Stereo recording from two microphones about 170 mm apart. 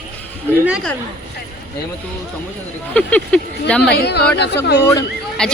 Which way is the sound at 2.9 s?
5° left (ahead or behind).